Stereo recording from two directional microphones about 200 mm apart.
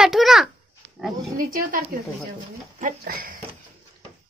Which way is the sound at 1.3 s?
45° right (ahead or behind).